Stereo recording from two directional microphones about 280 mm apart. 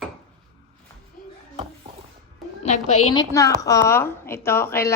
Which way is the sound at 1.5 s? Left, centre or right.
Right.